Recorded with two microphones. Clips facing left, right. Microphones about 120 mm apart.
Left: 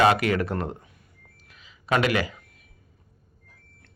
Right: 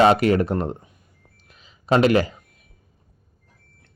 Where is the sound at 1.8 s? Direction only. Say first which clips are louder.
Right 6 dB; 30° right (ahead or behind).